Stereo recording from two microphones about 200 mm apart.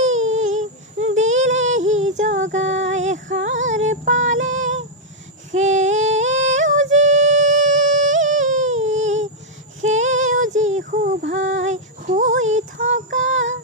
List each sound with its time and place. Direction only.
0.3 s a sound: 35° right (ahead or behind)
1.6 s music: 35° right (ahead or behind)
2.0 s female singing: 35° right (ahead or behind)
3.7 s child singing: 35° right (ahead or behind)
5.5 s singing: 35° right (ahead or behind)
9.8 s female singing: 35° right (ahead or behind)
11.6 s a sound: 35° right (ahead or behind)
13.3 s synthetic singing: 70° right (ahead or behind)